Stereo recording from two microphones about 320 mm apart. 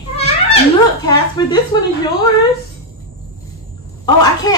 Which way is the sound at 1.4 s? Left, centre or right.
Centre.